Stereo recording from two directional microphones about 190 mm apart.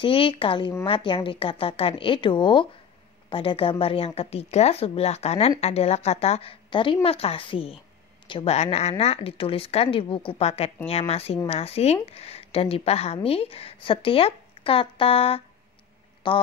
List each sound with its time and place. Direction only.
0.0 s a woman's voice: 30° left (ahead or behind)